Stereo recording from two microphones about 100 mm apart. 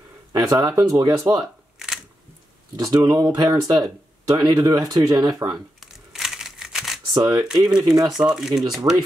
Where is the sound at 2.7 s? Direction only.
40° right (ahead or behind).